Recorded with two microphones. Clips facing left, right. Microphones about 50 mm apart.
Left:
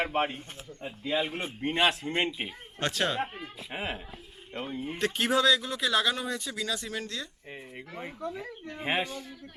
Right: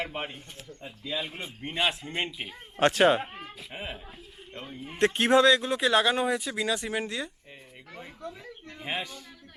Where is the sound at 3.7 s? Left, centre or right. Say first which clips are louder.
Left 4 dB; left.